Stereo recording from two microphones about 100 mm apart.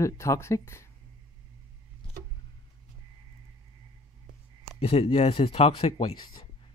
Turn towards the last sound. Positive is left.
turn(degrees=45)  # may be behind; listen again after turning